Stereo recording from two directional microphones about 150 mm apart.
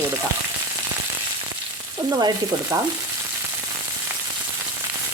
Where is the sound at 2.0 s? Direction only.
25° right (ahead or behind).